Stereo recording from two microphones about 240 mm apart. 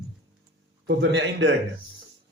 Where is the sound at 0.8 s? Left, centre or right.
Right.